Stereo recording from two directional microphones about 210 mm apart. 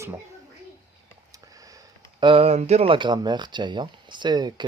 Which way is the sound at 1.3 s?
15° right (ahead or behind).